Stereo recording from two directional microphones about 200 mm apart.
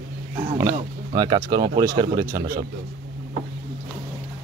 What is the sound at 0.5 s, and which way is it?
Speech, 25° right (ahead or behind).